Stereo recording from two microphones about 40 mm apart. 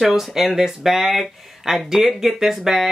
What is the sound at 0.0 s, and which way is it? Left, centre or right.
Speech, centre.